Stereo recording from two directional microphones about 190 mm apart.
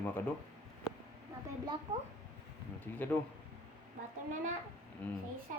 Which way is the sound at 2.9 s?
10° left (ahead or behind).